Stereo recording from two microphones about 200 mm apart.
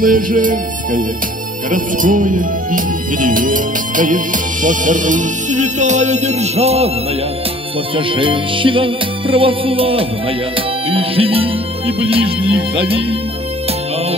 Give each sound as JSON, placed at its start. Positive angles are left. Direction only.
{"t": 0.0, "sound": "music", "side_deg": -45}
{"t": 7.9, "sound": "music", "side_deg": -25}